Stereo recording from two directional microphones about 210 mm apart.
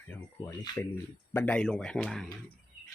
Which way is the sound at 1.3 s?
5° left (ahead or behind).